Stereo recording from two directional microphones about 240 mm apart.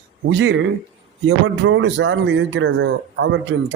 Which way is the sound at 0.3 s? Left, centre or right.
Right.